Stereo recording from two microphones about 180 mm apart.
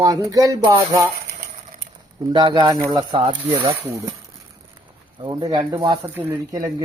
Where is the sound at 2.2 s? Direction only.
25° right (ahead or behind).